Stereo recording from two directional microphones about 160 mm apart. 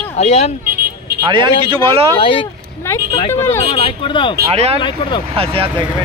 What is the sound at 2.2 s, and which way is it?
Speech, 35° left (ahead or behind).